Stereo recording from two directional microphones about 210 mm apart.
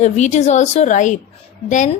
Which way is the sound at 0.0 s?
35° left (ahead or behind).